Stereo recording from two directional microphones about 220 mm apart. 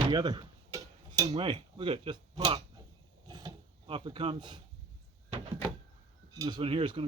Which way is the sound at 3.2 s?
20° right (ahead or behind).